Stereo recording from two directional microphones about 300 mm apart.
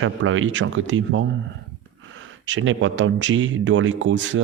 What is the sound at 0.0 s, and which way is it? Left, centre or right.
Speech, right.